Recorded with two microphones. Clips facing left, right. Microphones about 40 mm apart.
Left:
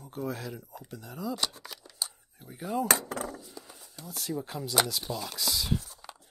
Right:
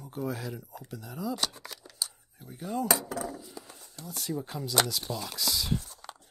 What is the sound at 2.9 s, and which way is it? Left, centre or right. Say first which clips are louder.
Wood: left 1 dB; left.